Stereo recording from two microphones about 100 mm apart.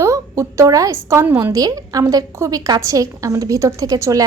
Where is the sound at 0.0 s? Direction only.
30° right (ahead or behind).